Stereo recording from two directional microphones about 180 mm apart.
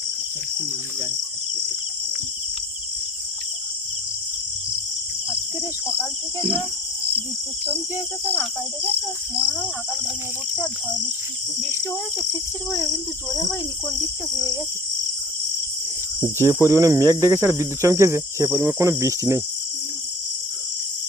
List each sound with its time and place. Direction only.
12.7 s speech: 20° left (ahead or behind)
16.2 s cricket: 15° right (ahead or behind)